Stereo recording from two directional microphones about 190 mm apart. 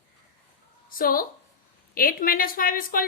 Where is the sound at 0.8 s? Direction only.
50° left (ahead or behind).